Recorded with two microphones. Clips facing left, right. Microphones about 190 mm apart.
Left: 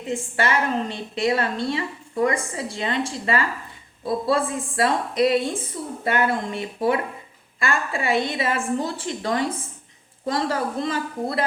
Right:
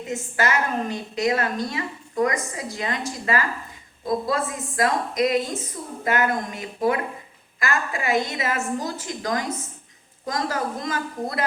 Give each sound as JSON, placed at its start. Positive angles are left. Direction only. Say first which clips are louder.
{"t": 0.1, "sound": "a woman's voice", "louder": "left 1 dB", "side_deg": 30}